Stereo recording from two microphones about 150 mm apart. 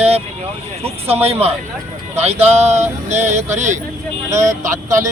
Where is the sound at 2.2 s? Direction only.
45° right (ahead or behind).